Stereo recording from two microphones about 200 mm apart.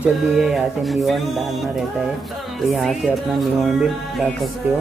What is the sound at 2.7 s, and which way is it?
Speech, centre (ahead or behind).